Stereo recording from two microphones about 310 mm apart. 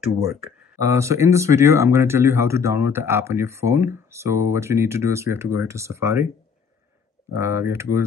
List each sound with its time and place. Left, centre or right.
0.7 s speech: centre
7.3 s speech: centre